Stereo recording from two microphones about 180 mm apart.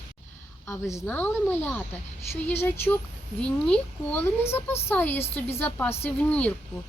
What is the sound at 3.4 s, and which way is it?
Speech, 5° left (ahead or behind).